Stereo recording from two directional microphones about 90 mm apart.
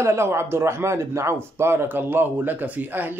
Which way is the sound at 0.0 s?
30° right (ahead or behind).